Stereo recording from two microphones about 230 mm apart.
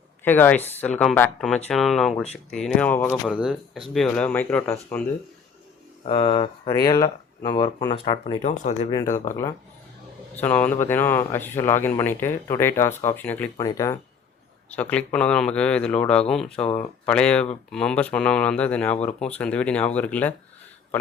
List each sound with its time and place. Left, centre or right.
0.3 s speech: centre
6.1 s speech: left
8.9 s speech: centre